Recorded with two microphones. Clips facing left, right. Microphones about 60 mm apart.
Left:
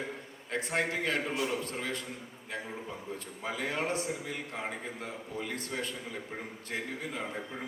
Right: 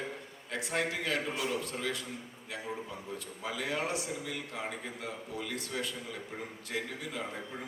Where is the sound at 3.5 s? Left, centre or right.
Left.